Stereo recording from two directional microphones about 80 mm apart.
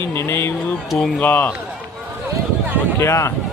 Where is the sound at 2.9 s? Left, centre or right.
Left.